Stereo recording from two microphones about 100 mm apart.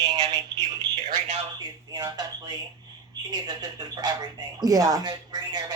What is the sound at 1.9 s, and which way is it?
Speech, 40° right (ahead or behind).